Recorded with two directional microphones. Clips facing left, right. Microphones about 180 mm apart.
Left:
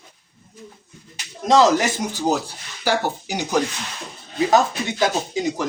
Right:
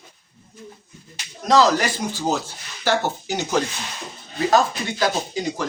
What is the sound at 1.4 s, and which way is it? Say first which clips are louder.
A man's voice: left 1 dB; 25° left (ahead or behind).